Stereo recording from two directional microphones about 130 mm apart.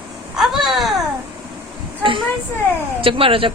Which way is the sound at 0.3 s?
Centre (ahead or behind).